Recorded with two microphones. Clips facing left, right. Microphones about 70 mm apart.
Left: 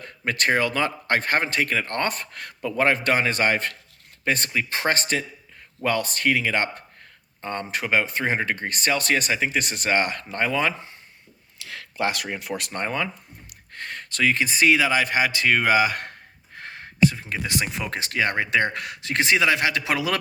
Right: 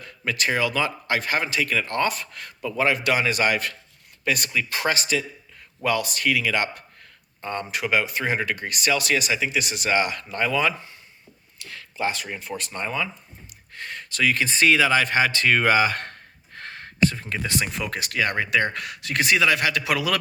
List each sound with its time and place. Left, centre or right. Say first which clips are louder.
0.0 s a man's voice: left 2 dB; left
11.7 s speech: left 1 dB; left
13.7 s speech: even; left
14.3 s speech: right 1 dB; centre